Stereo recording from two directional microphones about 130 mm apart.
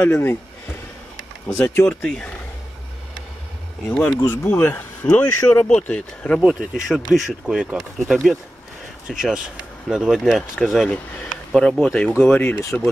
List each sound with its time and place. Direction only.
0.0 s speech: 20° left (ahead or behind)
1.5 s speech: 20° left (ahead or behind)
2.0 s speech: 5° left (ahead or behind)
3.9 s speech: 5° left (ahead or behind)
6.4 s speech: 5° right (ahead or behind); by 12.6 s 10° left (ahead or behind)